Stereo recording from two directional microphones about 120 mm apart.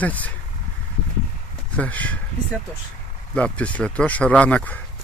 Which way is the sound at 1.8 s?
15° left (ahead or behind).